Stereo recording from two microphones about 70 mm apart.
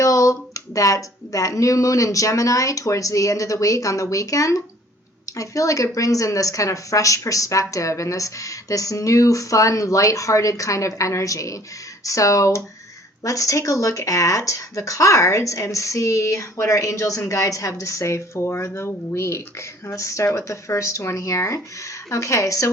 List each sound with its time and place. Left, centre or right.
0.0 s speech: left